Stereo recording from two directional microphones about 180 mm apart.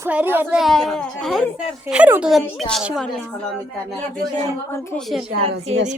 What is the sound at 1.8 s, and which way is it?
Speech, 10° right (ahead or behind).